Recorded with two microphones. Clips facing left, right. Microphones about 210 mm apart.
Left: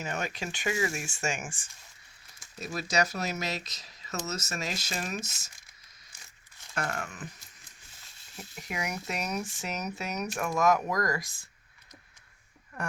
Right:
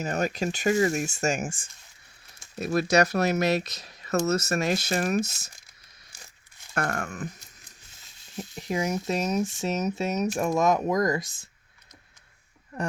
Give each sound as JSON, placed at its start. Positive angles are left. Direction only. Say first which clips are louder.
{"t": 0.0, "sound": "speech", "louder": "right 8 dB", "side_deg": -40}
{"t": 2.6, "sound": "speech", "louder": "right 8 dB", "side_deg": -60}
{"t": 6.7, "sound": "speech", "louder": "right 5 dB", "side_deg": -50}
{"t": 8.4, "sound": "speech", "louder": "right 8 dB", "side_deg": -30}